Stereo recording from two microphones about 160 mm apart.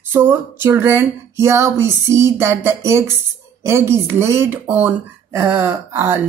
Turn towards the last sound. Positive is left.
turn(degrees=-15)  # may be behind; listen again after turning